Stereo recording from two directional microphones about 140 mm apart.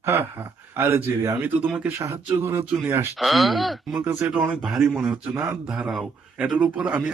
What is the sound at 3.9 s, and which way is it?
Speech, 15° right (ahead or behind).